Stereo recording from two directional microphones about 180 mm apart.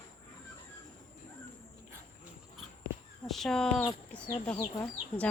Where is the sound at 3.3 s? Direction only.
5° left (ahead or behind).